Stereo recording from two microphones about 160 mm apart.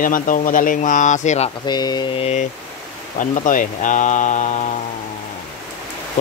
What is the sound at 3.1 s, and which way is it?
Speech, 55° left (ahead or behind).